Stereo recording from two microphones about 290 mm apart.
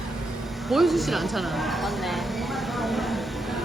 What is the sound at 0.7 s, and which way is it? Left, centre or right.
Speech, centre.